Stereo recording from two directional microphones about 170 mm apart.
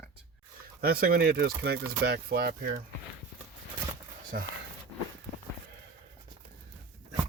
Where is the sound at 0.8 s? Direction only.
60° right (ahead or behind).